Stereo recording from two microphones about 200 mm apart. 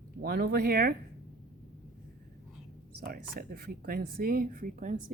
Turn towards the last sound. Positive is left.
turn(degrees=-40)  # may be behind; listen again after turning